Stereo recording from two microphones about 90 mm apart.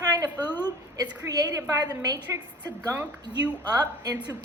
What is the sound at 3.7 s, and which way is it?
Speech, 45° right (ahead or behind).